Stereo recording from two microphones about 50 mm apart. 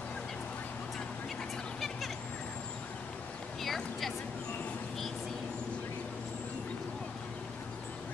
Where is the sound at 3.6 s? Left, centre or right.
Centre.